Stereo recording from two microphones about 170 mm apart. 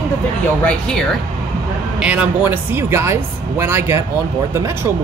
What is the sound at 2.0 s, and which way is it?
Speech, 5° right (ahead or behind).